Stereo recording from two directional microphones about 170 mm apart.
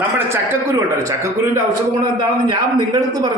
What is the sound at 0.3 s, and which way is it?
A man's voice, 20° right (ahead or behind).